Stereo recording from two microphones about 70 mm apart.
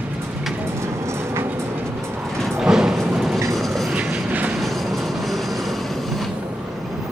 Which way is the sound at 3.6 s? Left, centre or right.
Centre.